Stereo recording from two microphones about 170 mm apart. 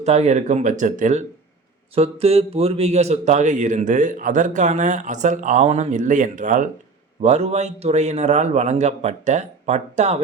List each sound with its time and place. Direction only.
0.0 s speech: 40° right (ahead or behind)
2.0 s a man's voice: 35° right (ahead or behind)